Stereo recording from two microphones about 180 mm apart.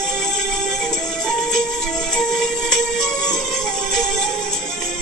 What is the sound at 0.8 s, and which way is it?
Music, 5° left (ahead or behind).